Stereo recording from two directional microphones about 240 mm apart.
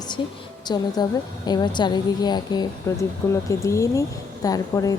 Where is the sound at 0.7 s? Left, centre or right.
Centre.